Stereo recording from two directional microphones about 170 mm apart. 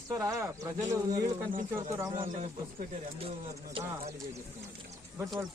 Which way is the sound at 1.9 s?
15° right (ahead or behind).